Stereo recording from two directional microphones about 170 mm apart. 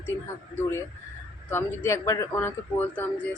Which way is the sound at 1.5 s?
15° left (ahead or behind).